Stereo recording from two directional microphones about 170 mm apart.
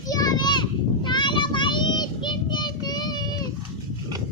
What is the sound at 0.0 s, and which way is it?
Children playing, 20° left (ahead or behind).